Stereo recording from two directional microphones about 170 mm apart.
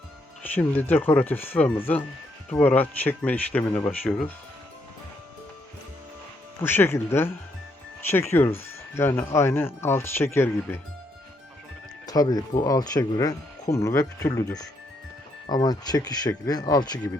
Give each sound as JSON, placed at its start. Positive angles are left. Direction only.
{"t": 0.5, "sound": "speech", "side_deg": 10}
{"t": 6.6, "sound": "speech", "side_deg": 15}
{"t": 12.0, "sound": "speech", "side_deg": 20}